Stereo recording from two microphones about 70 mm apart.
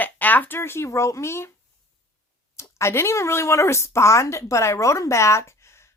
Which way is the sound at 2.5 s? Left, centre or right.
Left.